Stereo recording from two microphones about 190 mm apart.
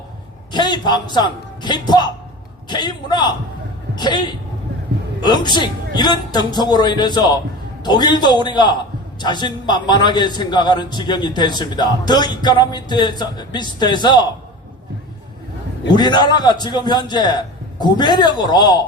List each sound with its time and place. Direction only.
0.5 s a man's voice: 20° left (ahead or behind)
15.9 s a man's voice: 20° left (ahead or behind)